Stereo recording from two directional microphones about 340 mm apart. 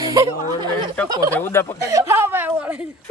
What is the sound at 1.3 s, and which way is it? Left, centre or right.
Speech, centre.